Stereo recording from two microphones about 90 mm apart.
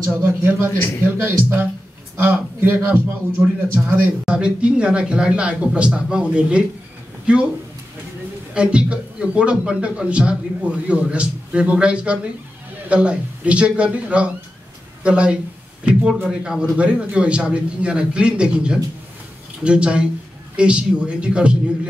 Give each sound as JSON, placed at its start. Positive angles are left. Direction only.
{"t": 0.0, "sound": "a man's voice", "side_deg": -25}
{"t": 8.5, "sound": "a man's voice", "side_deg": -10}